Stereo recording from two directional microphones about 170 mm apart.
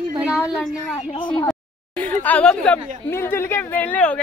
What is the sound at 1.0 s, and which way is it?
Speech, 30° left (ahead or behind).